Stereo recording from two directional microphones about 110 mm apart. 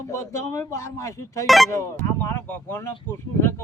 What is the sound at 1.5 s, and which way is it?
Speech, centre (ahead or behind).